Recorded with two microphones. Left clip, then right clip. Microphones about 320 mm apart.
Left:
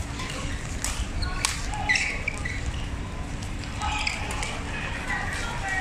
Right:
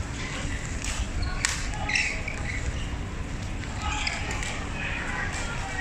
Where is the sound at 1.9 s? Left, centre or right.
Left.